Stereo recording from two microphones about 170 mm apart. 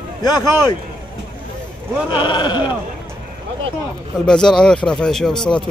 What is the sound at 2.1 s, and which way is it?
Speech, 25° left (ahead or behind).